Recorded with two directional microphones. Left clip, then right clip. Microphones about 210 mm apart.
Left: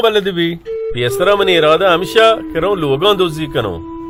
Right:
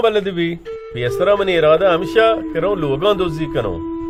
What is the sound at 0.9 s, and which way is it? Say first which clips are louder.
Speech: left 2 dB; 45° left (ahead or behind).